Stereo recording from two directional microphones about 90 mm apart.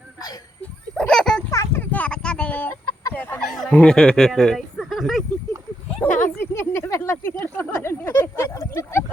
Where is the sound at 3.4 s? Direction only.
5° left (ahead or behind).